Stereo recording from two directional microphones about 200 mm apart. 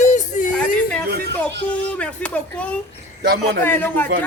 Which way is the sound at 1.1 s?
55° right (ahead or behind).